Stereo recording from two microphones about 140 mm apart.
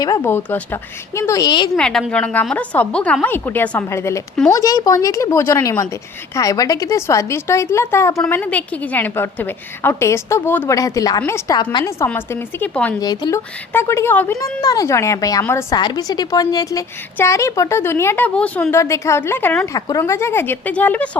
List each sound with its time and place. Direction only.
0.2 s a woman's voice: 15° left (ahead or behind)
1.7 s a woman's voice: 5° left (ahead or behind); by 11.6 s 20° left (ahead or behind)
11.6 s a woman's voice: 30° left (ahead or behind)
11.9 s a woman's voice: 15° left (ahead or behind)
13.0 s a woman's voice: 30° left (ahead or behind); by 21.2 s 10° left (ahead or behind)